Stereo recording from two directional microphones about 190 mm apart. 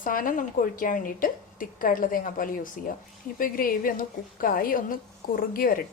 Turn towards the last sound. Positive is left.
turn(degrees=50)  # may be behind; listen again after turning